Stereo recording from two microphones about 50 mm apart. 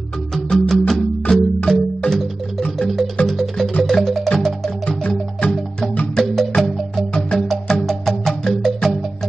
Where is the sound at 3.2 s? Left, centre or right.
Centre.